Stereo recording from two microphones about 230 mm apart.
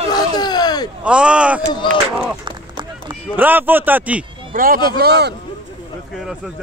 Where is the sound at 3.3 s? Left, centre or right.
Centre.